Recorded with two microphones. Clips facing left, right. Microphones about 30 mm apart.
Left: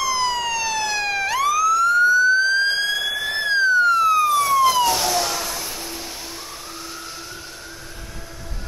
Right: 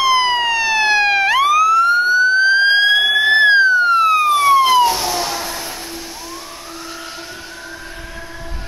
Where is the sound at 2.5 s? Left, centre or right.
Right.